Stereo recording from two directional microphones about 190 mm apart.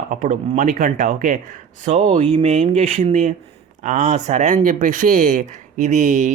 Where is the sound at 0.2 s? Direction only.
40° right (ahead or behind).